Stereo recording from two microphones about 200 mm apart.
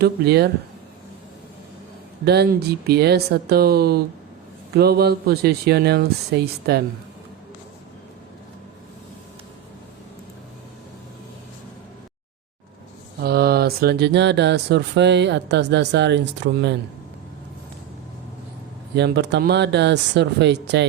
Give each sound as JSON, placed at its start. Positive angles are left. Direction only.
{"t": 0.0, "sound": "speech", "side_deg": -55}
{"t": 2.2, "sound": "speech", "side_deg": -55}
{"t": 13.2, "sound": "speech", "side_deg": -50}
{"t": 18.9, "sound": "speech", "side_deg": -60}